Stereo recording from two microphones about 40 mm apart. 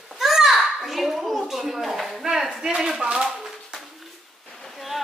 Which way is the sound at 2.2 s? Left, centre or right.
Centre.